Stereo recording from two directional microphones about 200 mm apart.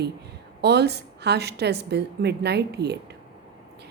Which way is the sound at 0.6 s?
55° right (ahead or behind).